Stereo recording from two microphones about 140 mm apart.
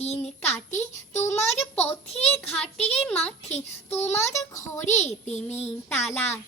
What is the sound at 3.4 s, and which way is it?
Child singing, 50° left (ahead or behind).